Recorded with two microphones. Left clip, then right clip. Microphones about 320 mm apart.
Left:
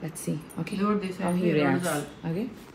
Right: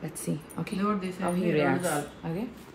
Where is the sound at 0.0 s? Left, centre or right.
Right.